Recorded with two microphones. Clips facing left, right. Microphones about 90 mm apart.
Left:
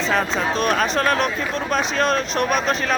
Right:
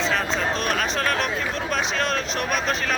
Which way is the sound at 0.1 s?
40° left (ahead or behind).